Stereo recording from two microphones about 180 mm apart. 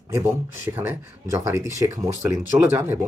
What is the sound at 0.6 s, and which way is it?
Speech, 10° right (ahead or behind).